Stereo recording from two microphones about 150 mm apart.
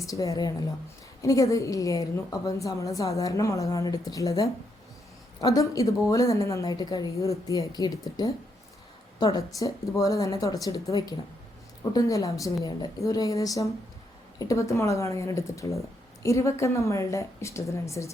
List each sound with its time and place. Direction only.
0.0 s a woman's voice: 20° left (ahead or behind)